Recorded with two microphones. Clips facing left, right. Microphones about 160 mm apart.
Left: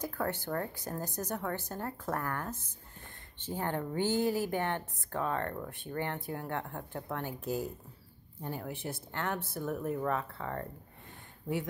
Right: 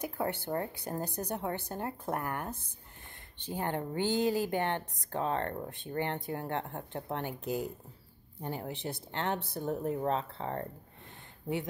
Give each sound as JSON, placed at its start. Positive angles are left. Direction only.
{"t": 0.2, "sound": "a woman's voice", "side_deg": -25}